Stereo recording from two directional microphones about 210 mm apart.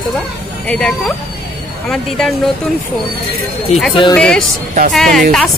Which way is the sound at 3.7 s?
30° left (ahead or behind).